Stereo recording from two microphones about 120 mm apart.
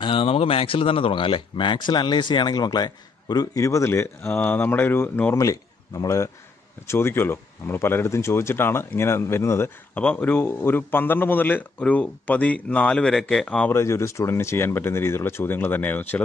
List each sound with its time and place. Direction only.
0.0 s a man's voice: 50° left (ahead or behind); by 13.7 s 10° left (ahead or behind)
13.7 s speech: 25° left (ahead or behind)